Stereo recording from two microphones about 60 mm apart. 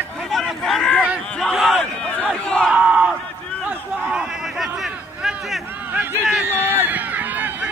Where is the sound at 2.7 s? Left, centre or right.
Centre.